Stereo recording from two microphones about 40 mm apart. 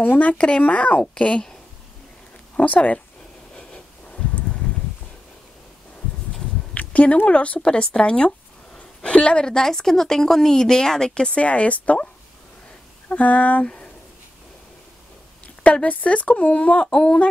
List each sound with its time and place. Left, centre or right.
0.3 s speech: left
2.5 s speech: left
4.4 s a sound: left
6.7 s a sound: left
7.2 s speech: left
8.0 s a sound: left
9.6 s speech: centre
11.2 s speech: left
13.1 s speech: left
15.4 s speech: left